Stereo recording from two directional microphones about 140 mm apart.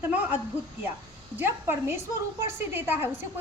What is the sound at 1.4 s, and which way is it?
A woman's voice, 15° right (ahead or behind).